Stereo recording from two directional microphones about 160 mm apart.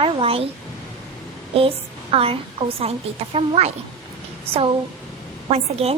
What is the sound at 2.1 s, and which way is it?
A woman's voice, 35° right (ahead or behind).